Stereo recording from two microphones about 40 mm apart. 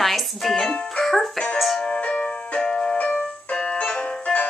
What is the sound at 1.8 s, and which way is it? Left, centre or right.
Music, left.